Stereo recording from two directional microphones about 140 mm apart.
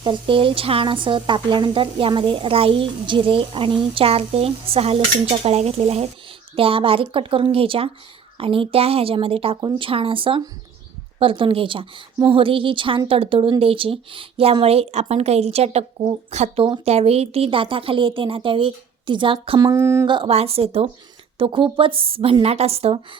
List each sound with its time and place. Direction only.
0.0 s speech: 35° right (ahead or behind); by 16.6 s 55° right (ahead or behind)
16.6 s speech: 40° right (ahead or behind)
19.6 s a sound: 20° right (ahead or behind)
20.1 s speech: 40° right (ahead or behind)